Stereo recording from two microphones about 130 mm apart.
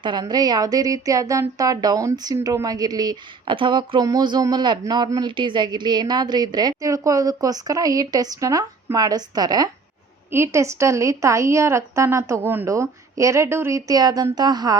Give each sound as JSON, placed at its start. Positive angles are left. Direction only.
{"t": 0.0, "sound": "a woman's voice", "side_deg": -35}
{"t": 10.3, "sound": "a woman's voice", "side_deg": -20}